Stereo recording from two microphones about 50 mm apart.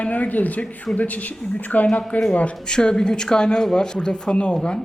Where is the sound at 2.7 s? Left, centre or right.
Centre.